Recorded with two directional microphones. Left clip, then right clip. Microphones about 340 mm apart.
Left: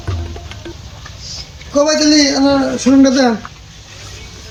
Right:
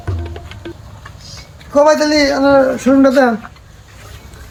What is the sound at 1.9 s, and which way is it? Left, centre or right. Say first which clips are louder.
Speech: left 1 dB; centre.